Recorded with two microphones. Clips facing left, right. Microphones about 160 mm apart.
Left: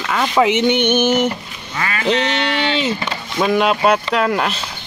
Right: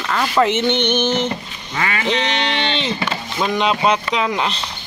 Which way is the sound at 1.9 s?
40° left (ahead or behind).